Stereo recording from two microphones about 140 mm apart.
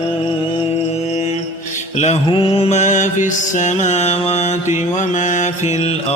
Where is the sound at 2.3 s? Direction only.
40° left (ahead or behind).